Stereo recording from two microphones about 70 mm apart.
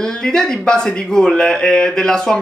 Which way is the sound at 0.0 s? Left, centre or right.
Centre.